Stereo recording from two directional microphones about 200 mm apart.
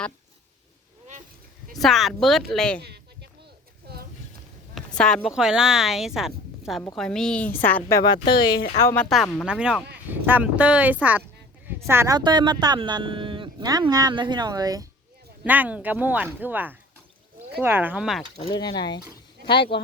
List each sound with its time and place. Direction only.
1.7 s speech: centre (ahead or behind)
2.8 s a sound: 55° right (ahead or behind)
4.7 s a woman's voice: 5° left (ahead or behind); by 8.5 s 20° left (ahead or behind)
8.8 s a woman's voice: 10° left (ahead or behind)
9.0 s speech: centre (ahead or behind); by 14.8 s 20° right (ahead or behind)
15.4 s speech: 10° right (ahead or behind)
18.5 s speech: 20° left (ahead or behind)
19.5 s speech: 55° left (ahead or behind)